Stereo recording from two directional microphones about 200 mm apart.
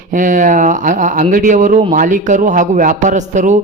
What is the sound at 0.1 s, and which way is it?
Speech, 40° right (ahead or behind).